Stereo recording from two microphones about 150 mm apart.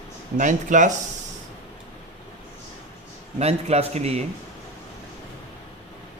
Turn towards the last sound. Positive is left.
turn(degrees=-45)  # may be behind; listen again after turning